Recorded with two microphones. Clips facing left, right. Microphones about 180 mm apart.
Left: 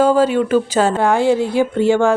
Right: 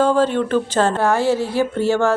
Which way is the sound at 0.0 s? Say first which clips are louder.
Left 3 dB; 10° left (ahead or behind).